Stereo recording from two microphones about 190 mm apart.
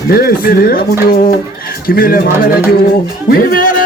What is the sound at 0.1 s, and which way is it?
Speech, 55° left (ahead or behind).